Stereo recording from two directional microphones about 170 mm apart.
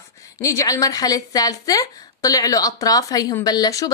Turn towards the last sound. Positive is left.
turn(degrees=20)  # may be behind; listen again after turning